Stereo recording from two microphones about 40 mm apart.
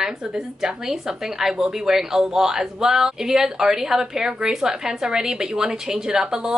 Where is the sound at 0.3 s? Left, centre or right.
Centre.